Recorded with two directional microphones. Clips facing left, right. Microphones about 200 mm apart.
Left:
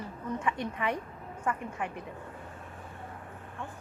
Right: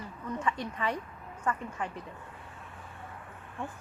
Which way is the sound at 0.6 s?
15° left (ahead or behind).